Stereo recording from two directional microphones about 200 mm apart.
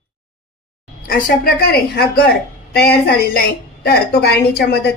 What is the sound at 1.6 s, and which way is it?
A woman's voice, 50° left (ahead or behind).